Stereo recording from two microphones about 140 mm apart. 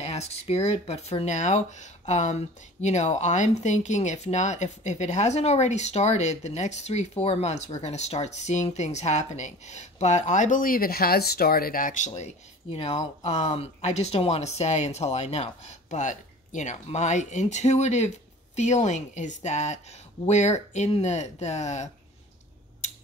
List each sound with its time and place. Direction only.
0.0 s speech: 50° left (ahead or behind); by 12.1 s 70° left (ahead or behind)
12.7 s speech: 45° left (ahead or behind)